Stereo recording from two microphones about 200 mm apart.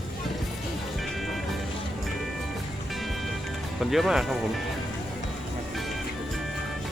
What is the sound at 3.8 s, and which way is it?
Speech, centre (ahead or behind).